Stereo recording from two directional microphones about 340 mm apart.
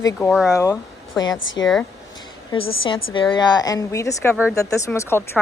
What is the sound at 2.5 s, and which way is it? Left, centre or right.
Speech, centre.